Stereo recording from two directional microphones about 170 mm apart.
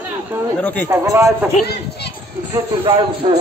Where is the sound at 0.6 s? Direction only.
10° left (ahead or behind).